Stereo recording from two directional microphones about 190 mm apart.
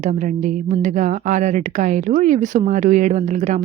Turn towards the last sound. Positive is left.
turn(degrees=-40)  # may be behind; listen again after turning